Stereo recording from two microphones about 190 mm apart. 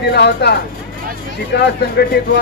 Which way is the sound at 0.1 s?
60° left (ahead or behind).